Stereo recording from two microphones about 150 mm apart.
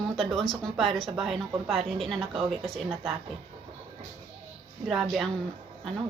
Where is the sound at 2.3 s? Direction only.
35° right (ahead or behind).